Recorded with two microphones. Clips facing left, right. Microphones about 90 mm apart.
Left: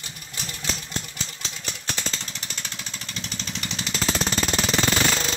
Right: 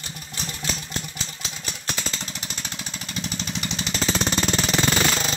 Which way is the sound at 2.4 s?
10° right (ahead or behind).